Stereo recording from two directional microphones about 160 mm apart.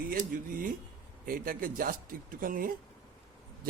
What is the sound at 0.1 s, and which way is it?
A man's voice, 60° right (ahead or behind).